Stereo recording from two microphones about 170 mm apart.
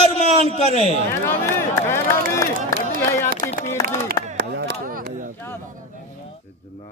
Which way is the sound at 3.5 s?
40° left (ahead or behind).